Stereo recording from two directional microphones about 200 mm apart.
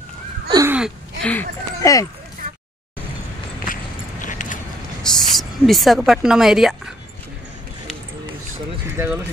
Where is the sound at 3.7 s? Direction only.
40° left (ahead or behind).